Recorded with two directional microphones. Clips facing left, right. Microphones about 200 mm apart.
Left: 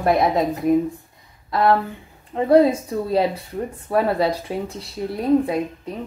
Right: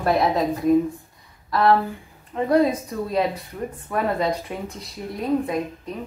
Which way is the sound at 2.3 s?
30° left (ahead or behind).